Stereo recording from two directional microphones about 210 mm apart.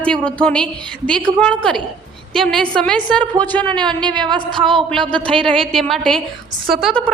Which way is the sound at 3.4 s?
5° left (ahead or behind).